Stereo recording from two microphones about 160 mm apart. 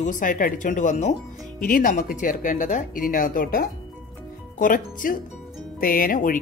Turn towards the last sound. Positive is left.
turn(degrees=60)  # may be behind; listen again after turning